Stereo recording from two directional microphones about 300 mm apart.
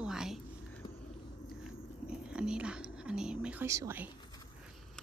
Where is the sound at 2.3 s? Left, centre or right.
Centre.